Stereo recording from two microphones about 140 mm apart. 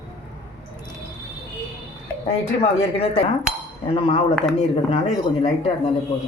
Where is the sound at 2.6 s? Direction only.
45° left (ahead or behind).